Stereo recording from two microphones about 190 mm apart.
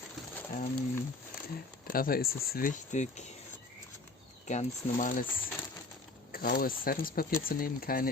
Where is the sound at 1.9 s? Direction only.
50° left (ahead or behind).